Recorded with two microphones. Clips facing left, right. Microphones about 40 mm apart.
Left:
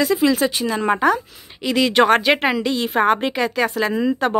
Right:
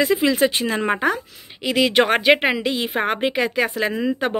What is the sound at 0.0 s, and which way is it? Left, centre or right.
Speech, right.